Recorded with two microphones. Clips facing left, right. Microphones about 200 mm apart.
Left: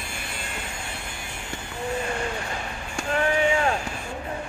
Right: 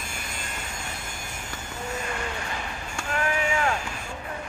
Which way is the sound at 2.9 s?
30° left (ahead or behind).